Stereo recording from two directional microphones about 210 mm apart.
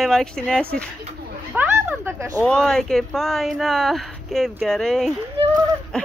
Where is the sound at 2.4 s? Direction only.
5° left (ahead or behind).